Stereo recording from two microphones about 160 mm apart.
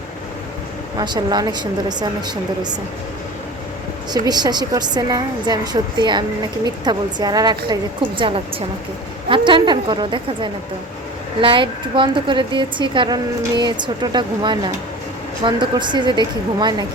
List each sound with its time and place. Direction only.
0.9 s speech: 25° right (ahead or behind)
4.1 s speech: 25° right (ahead or behind)
9.3 s speech: 30° right (ahead or behind)